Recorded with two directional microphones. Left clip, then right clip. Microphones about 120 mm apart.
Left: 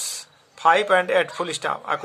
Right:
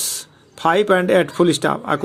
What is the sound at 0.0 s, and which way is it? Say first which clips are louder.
Speech: right 5 dB; 35° right (ahead or behind).